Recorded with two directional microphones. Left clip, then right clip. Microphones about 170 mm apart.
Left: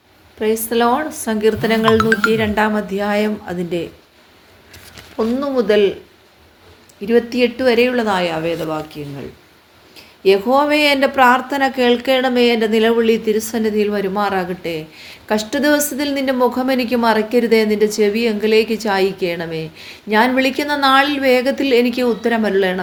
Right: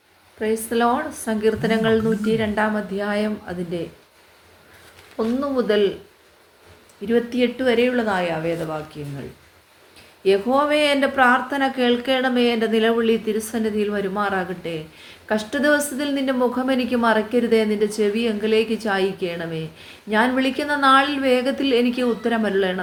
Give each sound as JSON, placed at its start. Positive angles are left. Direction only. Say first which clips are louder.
{"t": 0.3, "sound": "speech", "louder": "left 5 dB", "side_deg": 40}
{"t": 5.1, "sound": "speech", "louder": "left 4 dB", "side_deg": 40}
{"t": 7.0, "sound": "speech", "louder": "left 5 dB", "side_deg": 35}
{"t": 10.2, "sound": "speech", "louder": "left 5 dB", "side_deg": 40}